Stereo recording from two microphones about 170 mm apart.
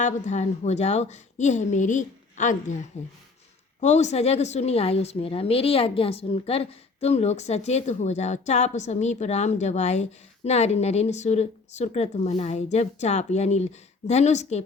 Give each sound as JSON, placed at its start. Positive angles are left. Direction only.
{"t": 0.0, "sound": "a woman's voice", "side_deg": 45}